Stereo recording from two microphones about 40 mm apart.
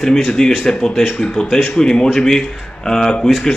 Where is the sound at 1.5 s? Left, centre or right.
Centre.